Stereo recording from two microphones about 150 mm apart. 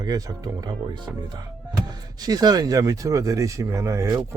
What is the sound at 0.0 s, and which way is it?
Speech, 25° right (ahead or behind).